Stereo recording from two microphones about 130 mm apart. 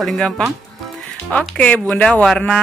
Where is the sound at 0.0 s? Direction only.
Centre (ahead or behind).